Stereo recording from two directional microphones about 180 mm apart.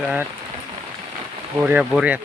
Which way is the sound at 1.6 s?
5° right (ahead or behind).